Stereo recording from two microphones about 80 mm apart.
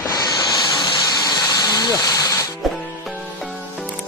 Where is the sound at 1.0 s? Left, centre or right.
Left.